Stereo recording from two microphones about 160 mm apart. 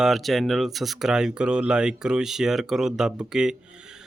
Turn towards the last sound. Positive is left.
turn(degrees=-5)  # may be behind; listen again after turning